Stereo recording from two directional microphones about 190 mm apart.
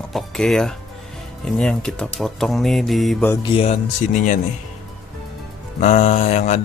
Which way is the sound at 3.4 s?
30° left (ahead or behind).